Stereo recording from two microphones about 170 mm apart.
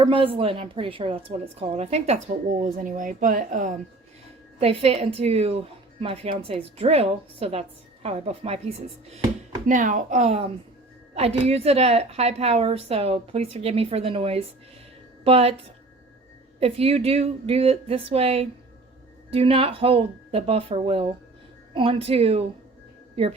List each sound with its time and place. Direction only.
0.0 s a woman's voice: 30° right (ahead or behind)
2.6 s speech: 50° right (ahead or behind)
4.6 s a woman's voice: 35° right (ahead or behind)
9.6 s a woman's voice: 50° right (ahead or behind)
16.6 s a woman's voice: 35° right (ahead or behind)